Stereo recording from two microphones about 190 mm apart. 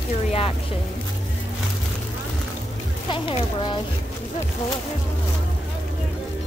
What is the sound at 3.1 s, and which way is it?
Speech, 25° left (ahead or behind).